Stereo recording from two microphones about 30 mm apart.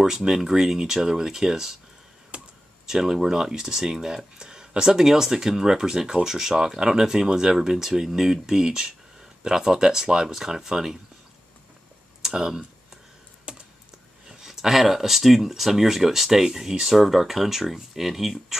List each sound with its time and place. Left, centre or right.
0.3 s speech: centre
2.3 s computer keyboard: right
2.9 s speech: centre
12.2 s speech: centre
13.5 s computer keyboard: right
14.4 s speech: centre